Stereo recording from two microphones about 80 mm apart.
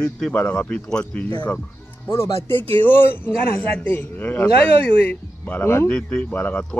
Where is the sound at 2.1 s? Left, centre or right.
Left.